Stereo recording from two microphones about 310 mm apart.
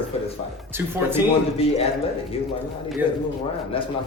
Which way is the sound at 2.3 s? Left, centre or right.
Centre.